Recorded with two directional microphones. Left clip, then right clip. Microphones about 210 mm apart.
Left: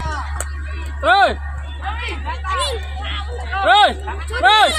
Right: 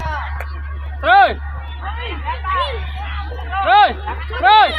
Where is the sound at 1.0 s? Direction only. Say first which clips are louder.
Right 2 dB; 50° left (ahead or behind).